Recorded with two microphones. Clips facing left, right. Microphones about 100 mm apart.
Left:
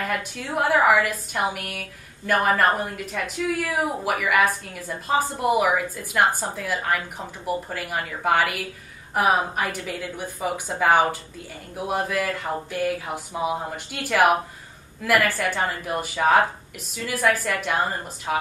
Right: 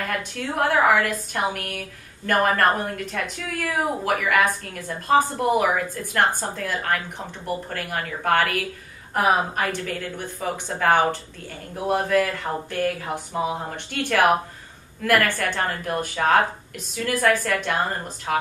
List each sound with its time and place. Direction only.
0.6 s a woman's voice: 5° left (ahead or behind)